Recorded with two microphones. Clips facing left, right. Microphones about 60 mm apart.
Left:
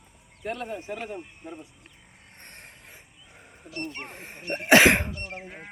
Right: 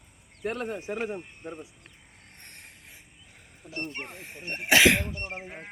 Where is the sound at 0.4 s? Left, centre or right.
Right.